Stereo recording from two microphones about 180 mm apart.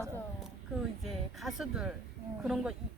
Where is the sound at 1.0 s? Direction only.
Centre (ahead or behind).